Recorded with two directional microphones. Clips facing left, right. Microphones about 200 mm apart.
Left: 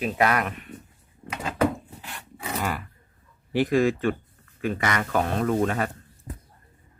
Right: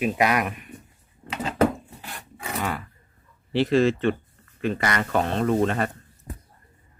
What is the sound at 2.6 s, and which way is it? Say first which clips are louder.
Roaring cats: right 1 dB; 5° left (ahead or behind).